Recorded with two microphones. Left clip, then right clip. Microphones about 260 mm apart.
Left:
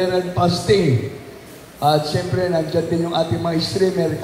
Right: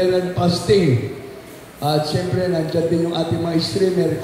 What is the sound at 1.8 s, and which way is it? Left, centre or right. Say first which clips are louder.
A man's voice: left 2 dB; centre.